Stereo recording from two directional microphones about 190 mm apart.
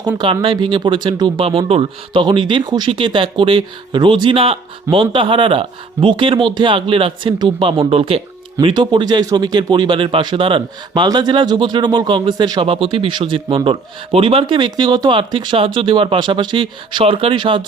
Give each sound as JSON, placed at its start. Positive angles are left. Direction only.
{"t": 0.2, "sound": "speech", "side_deg": -25}